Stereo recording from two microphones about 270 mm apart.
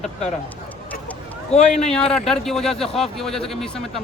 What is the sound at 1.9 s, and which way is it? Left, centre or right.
Speech, centre.